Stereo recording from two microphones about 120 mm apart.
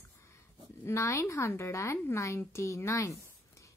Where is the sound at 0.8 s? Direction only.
20° left (ahead or behind).